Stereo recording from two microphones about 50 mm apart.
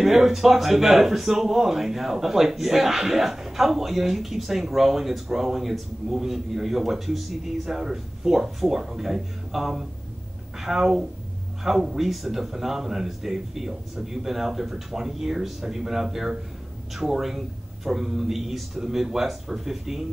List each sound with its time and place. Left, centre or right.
0.0 s speech: centre